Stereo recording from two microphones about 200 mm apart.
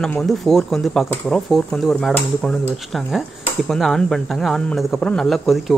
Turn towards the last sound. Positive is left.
turn(degrees=0)  # may be behind; listen again after turning